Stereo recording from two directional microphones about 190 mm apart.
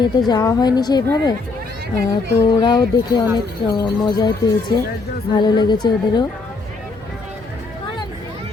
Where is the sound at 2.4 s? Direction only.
20° left (ahead or behind).